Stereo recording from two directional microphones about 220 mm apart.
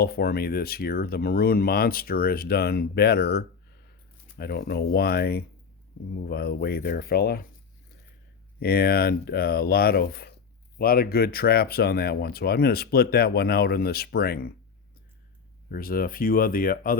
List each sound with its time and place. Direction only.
0.0 s speech: 45° left (ahead or behind)
8.5 s speech: 45° left (ahead or behind)
15.7 s speech: 40° left (ahead or behind)